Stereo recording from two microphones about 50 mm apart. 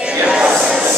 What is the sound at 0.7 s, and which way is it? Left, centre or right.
Music, centre.